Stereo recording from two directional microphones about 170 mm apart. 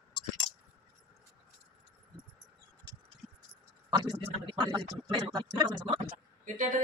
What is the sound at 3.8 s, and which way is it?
Speech, 25° right (ahead or behind).